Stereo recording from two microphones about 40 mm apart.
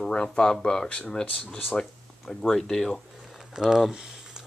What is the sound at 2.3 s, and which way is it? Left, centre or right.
Speech, centre.